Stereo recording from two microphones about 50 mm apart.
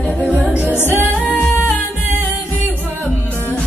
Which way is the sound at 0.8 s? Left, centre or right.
Left.